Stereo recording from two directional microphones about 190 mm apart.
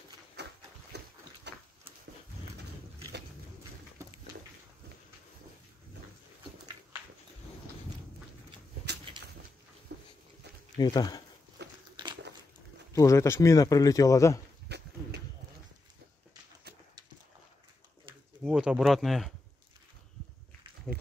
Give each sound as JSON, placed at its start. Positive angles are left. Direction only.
{"t": 0.4, "sound": "a sound", "side_deg": -60}
{"t": 9.9, "sound": "dog", "side_deg": -60}
{"t": 10.8, "sound": "speech", "side_deg": 20}
{"t": 12.9, "sound": "speech", "side_deg": 15}
{"t": 14.7, "sound": "a sound", "side_deg": -60}
{"t": 18.4, "sound": "speech", "side_deg": -5}
{"t": 20.9, "sound": "run", "side_deg": 5}